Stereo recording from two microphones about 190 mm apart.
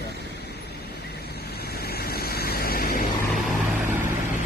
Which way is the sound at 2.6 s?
50° left (ahead or behind).